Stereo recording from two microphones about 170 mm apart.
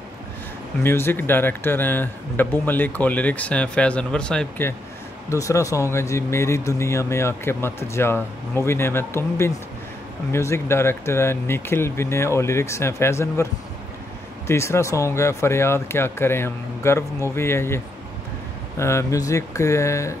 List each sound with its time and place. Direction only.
0.8 s speech: 15° left (ahead or behind)
14.5 s speech: 15° left (ahead or behind)